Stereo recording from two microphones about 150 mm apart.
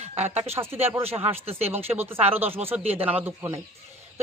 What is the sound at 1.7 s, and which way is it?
Speech, 15° right (ahead or behind).